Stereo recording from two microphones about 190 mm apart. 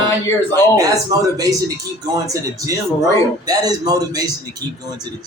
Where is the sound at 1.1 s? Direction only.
20° right (ahead or behind).